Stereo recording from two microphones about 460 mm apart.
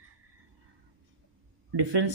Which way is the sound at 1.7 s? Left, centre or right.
Right.